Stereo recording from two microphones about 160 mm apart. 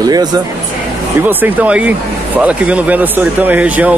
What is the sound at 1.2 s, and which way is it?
Speech, 10° right (ahead or behind).